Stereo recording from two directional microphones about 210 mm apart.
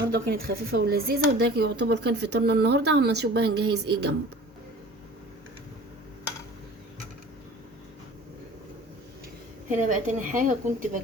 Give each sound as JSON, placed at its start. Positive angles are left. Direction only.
{"t": 0.1, "sound": "speech", "side_deg": -45}
{"t": 9.6, "sound": "a woman's voice", "side_deg": -35}